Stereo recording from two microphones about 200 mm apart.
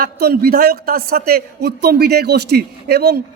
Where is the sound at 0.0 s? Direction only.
50° right (ahead or behind).